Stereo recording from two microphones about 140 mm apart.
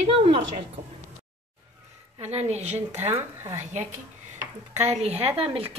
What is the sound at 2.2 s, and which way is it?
Speech, 50° right (ahead or behind).